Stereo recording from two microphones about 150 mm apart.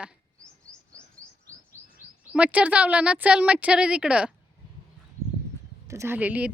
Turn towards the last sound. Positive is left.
turn(degrees=-10)  # may be behind; listen again after turning